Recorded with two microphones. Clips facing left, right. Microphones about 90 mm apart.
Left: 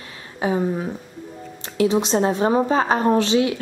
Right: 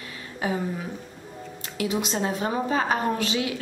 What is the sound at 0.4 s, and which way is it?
A woman's voice, 25° left (ahead or behind).